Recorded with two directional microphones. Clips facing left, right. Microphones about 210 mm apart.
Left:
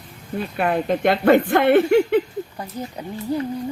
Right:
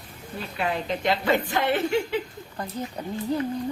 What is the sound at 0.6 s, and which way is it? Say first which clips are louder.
A woman's voice: left 7 dB; 55° left (ahead or behind).